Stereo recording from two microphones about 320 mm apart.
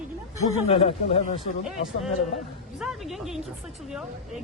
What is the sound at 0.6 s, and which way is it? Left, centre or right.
Speech, centre.